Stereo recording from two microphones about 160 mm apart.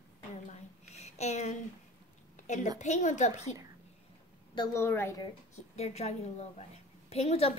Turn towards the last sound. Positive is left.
turn(degrees=40)  # may be behind; listen again after turning